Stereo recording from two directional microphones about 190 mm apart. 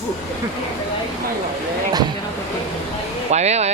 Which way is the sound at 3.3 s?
35° right (ahead or behind).